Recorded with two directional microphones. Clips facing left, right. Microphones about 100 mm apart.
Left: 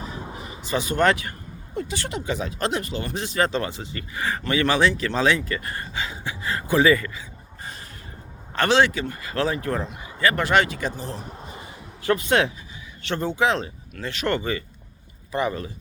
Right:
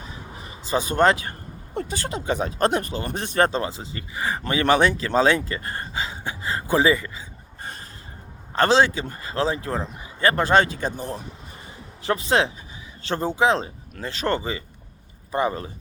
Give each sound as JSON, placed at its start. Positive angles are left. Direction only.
{"t": 0.0, "sound": "a sound", "side_deg": 30}
{"t": 0.7, "sound": "speech", "side_deg": -40}
{"t": 1.7, "sound": "speech", "side_deg": -50}
{"t": 2.0, "sound": "speech", "side_deg": -35}
{"t": 3.6, "sound": "speech", "side_deg": -25}
{"t": 6.4, "sound": "a sound", "side_deg": -30}
{"t": 8.5, "sound": "a man's voice", "side_deg": -30}
{"t": 10.9, "sound": "speech", "side_deg": -50}
{"t": 12.0, "sound": "speech", "side_deg": -25}